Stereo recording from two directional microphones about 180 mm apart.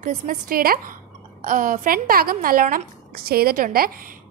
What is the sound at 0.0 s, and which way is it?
Speech, 50° right (ahead or behind).